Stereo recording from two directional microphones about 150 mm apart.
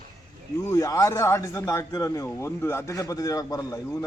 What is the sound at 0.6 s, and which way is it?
A man's voice, 20° left (ahead or behind).